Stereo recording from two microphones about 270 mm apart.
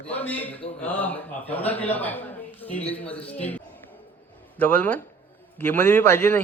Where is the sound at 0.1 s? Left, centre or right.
Centre.